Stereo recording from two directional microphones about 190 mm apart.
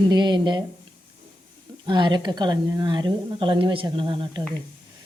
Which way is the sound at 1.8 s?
20° right (ahead or behind).